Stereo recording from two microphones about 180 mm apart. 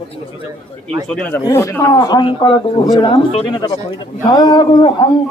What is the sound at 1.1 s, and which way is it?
A man's voice, 5° left (ahead or behind).